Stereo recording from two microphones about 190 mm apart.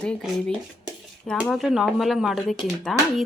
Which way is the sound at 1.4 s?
Centre (ahead or behind).